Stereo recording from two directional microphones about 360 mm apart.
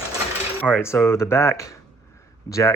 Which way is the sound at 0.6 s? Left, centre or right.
Centre.